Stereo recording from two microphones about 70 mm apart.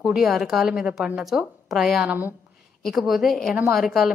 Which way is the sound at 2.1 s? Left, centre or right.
Right.